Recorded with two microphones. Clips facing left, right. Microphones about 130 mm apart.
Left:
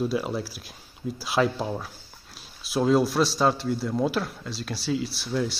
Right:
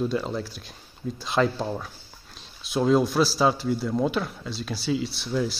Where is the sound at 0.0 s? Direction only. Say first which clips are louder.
Even; 5° left (ahead or behind).